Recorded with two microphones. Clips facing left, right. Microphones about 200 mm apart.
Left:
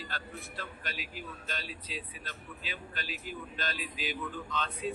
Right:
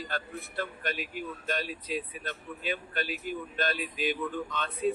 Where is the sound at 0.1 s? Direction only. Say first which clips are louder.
Right 6 dB; 55° right (ahead or behind).